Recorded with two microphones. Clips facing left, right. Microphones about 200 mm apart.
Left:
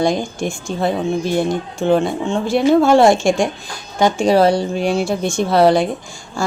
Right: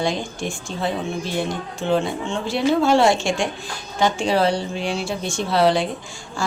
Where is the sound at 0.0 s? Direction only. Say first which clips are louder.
Left 6 dB; 45° left (ahead or behind).